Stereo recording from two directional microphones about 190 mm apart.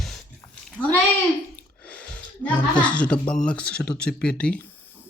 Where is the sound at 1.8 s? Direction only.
5° left (ahead or behind).